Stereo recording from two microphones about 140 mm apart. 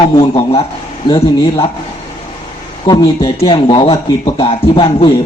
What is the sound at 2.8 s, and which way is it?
A man's voice, 30° left (ahead or behind).